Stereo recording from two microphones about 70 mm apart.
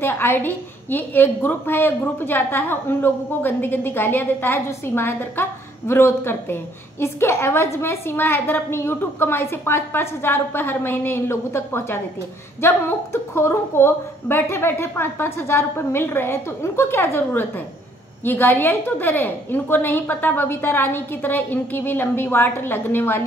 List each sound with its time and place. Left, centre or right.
0.0 s a woman's voice: left